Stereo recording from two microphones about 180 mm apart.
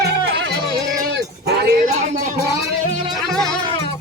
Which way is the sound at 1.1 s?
65° right (ahead or behind).